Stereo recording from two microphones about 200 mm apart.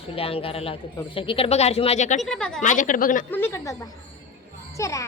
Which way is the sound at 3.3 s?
10° left (ahead or behind).